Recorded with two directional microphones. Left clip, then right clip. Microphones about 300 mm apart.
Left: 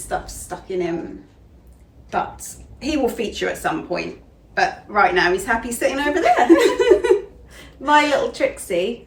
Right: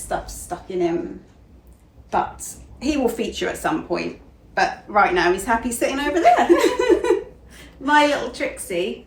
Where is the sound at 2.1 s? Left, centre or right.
Centre.